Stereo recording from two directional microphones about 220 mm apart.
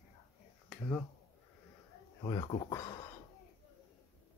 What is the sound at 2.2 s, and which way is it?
Speech, 20° left (ahead or behind).